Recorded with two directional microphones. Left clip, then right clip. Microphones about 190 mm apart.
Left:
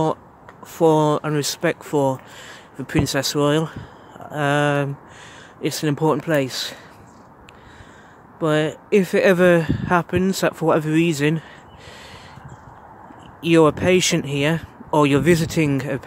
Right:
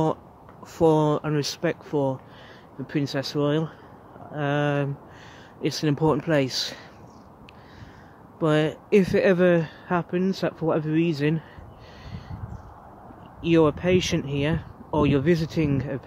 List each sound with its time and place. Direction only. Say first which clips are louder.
0.7 s speech: left 4 dB; 15° left (ahead or behind)
8.4 s speech: left 3 dB; 10° left (ahead or behind)
13.4 s speech: left 5 dB; 20° left (ahead or behind)